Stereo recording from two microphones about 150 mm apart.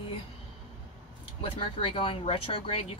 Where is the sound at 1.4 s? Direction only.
35° left (ahead or behind).